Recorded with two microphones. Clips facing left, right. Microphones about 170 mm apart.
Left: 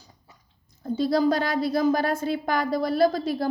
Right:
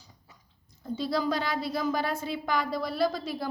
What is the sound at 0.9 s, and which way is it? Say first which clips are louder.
Speech: left 7 dB; 40° left (ahead or behind).